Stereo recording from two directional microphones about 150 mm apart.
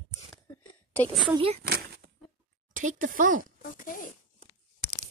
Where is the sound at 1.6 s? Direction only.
90° right.